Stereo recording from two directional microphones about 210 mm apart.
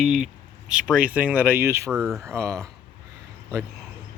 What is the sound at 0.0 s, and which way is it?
Speech, centre (ahead or behind).